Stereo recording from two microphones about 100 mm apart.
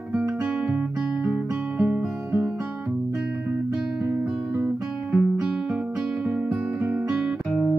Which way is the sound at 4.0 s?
30° right (ahead or behind).